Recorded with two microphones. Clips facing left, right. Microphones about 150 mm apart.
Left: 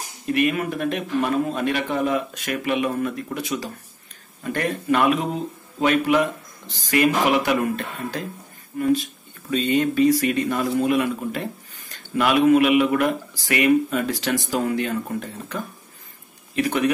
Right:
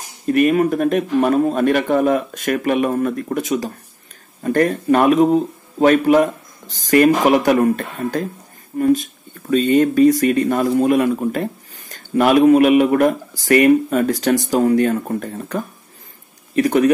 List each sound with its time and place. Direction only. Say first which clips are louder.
0.3 s speech: right 7 dB; 40° right (ahead or behind)